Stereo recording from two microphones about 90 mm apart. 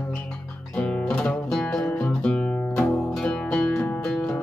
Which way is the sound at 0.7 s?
15° left (ahead or behind).